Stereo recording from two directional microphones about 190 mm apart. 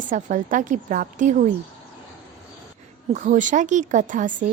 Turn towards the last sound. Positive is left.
turn(degrees=-45)  # may be behind; listen again after turning